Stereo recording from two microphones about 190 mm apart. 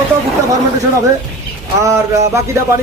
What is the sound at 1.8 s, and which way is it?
Speech, 15° right (ahead or behind).